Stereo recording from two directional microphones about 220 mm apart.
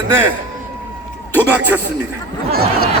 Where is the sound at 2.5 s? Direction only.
45° right (ahead or behind).